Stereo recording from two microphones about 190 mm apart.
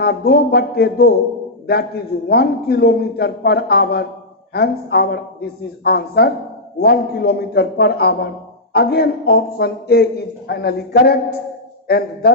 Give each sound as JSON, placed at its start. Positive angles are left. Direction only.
{"t": 0.0, "sound": "speech", "side_deg": 55}
{"t": 2.2, "sound": "speech", "side_deg": 55}